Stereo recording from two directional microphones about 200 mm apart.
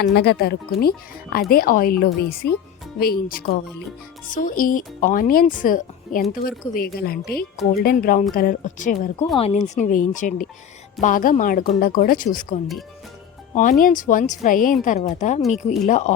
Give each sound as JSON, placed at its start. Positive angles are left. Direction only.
{"t": 0.0, "sound": "a woman's voice", "side_deg": 55}
{"t": 15.4, "sound": "speech", "side_deg": 0}
{"t": 15.9, "sound": "speech", "side_deg": 35}